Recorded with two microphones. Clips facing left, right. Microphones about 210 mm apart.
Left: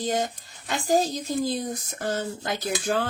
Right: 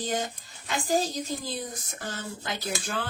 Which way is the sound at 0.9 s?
40° left (ahead or behind).